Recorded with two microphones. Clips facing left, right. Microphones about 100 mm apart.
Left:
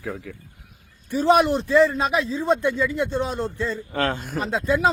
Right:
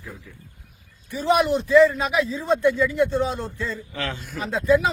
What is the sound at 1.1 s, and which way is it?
A man's voice, 35° left (ahead or behind).